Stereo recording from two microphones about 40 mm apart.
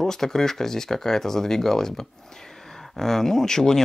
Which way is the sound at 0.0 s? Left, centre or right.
Centre.